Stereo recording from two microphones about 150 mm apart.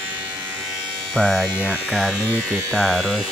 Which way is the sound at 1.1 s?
5° left (ahead or behind).